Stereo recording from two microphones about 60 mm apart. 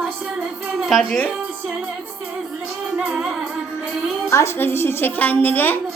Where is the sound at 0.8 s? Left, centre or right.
Centre.